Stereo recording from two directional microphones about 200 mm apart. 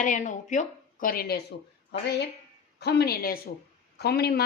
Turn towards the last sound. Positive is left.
turn(degrees=50)  # may be behind; listen again after turning